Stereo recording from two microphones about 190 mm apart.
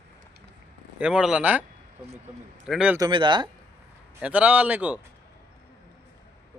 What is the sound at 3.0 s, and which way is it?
Speech, 25° right (ahead or behind).